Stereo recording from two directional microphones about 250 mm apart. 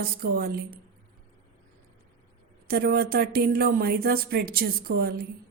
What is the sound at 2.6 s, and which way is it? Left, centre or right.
Speech, right.